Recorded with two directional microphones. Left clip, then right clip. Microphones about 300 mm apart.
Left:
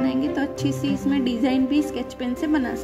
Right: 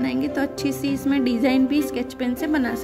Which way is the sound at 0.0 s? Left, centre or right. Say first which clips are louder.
Even; centre.